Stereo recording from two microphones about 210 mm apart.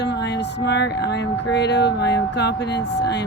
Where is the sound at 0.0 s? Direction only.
55° left (ahead or behind).